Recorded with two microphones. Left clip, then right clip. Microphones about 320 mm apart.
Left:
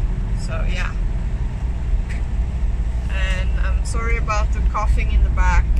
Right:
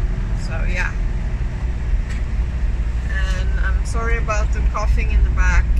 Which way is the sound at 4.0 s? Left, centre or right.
Centre.